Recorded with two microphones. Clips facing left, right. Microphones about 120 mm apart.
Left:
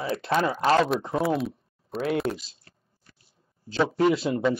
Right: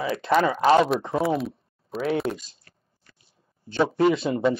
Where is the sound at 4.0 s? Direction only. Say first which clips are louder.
Right 1 dB; centre (ahead or behind).